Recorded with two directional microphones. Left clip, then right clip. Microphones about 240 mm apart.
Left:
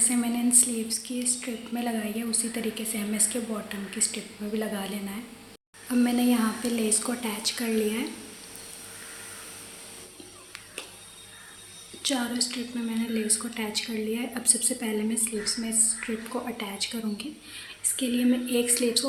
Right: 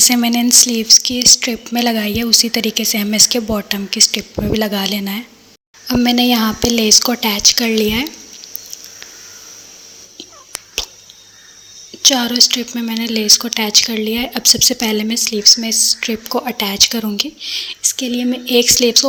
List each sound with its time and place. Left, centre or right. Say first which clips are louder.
0.0 s speech: right 14 dB; right
12.0 s speech: right 17 dB; right
15.7 s a woman's voice: right 15 dB; centre
16.0 s speech: right 13 dB; right